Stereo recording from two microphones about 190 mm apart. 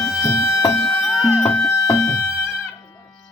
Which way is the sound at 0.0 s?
15° left (ahead or behind).